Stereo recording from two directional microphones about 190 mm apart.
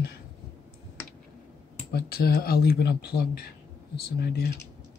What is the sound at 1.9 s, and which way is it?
Speech, 55° left (ahead or behind).